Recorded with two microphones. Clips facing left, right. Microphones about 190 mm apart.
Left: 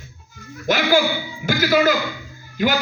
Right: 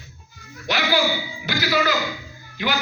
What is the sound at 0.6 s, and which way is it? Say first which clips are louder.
A man's voice: left 4 dB; 50° left (ahead or behind).